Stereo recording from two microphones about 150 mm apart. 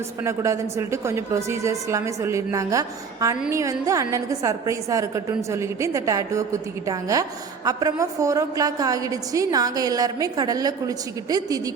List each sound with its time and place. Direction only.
0.3 s a woman's voice: 20° right (ahead or behind)